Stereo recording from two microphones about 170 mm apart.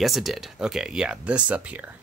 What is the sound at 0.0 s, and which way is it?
Speech, centre (ahead or behind).